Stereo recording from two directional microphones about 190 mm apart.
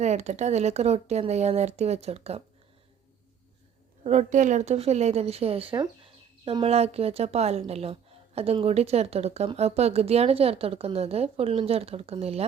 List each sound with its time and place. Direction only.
0.0 s a woman's voice: 35° right (ahead or behind)
4.0 s a woman's voice: 35° right (ahead or behind)